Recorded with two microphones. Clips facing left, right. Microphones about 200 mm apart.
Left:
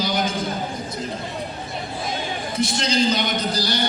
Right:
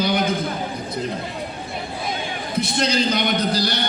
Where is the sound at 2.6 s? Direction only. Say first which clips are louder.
Left 1 dB; 60° right (ahead or behind).